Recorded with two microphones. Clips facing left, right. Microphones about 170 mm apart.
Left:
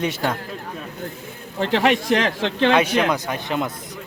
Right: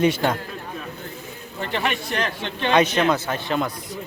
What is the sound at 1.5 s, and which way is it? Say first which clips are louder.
Speech: left 7 dB; 90° left.